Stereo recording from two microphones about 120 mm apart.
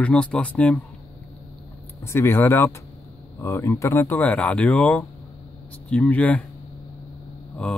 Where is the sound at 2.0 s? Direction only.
20° left (ahead or behind).